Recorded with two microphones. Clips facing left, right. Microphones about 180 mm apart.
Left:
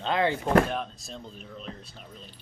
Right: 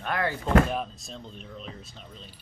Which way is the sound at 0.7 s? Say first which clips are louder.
Right 1 dB; centre (ahead or behind).